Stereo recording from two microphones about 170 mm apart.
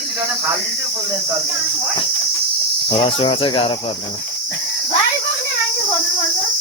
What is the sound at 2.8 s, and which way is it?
Speech, 35° left (ahead or behind).